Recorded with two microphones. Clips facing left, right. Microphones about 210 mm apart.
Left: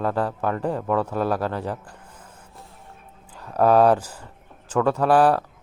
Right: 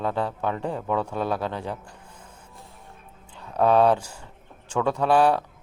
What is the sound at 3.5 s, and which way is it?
A man's voice, 5° left (ahead or behind).